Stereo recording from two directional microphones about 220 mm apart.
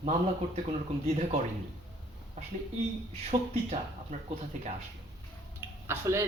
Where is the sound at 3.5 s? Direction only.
30° right (ahead or behind).